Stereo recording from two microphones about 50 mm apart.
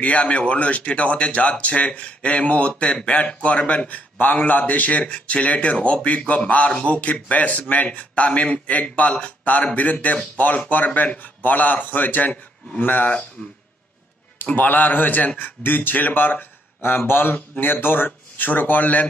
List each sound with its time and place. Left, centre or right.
0.0 s a man's voice: left
13.4 s speech: left
14.4 s a man's voice: left